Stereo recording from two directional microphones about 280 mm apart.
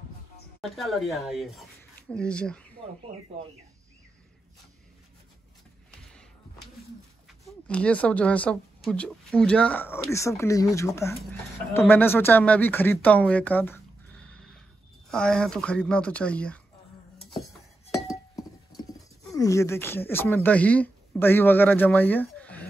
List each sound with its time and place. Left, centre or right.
0.6 s speech: centre
7.4 s speech: centre
17.9 s glass: centre
19.3 s speech: centre